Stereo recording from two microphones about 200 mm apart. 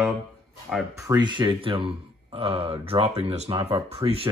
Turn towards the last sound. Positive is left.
turn(degrees=-30)  # may be behind; listen again after turning